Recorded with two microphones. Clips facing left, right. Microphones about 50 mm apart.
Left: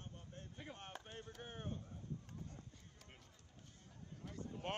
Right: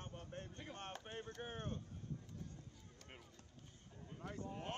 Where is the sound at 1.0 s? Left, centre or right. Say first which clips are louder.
Right 4 dB; right.